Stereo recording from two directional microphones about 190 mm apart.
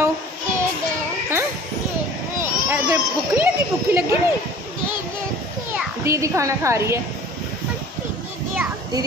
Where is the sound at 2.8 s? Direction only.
15° right (ahead or behind).